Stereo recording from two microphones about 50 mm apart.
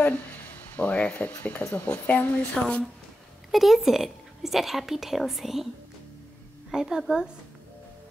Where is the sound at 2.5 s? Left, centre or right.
Left.